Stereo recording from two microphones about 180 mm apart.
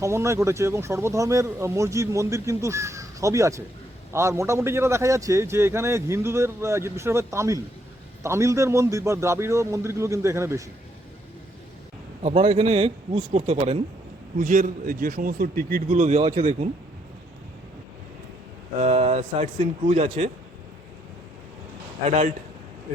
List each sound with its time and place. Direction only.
0.0 s speech: 15° right (ahead or behind)
12.2 s speech: 35° right (ahead or behind)
14.3 s a man's voice: 45° right (ahead or behind)
18.8 s speech: 35° right (ahead or behind)